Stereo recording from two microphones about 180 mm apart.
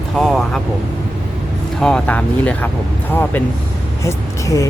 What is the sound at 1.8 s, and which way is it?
Speech, 5° left (ahead or behind).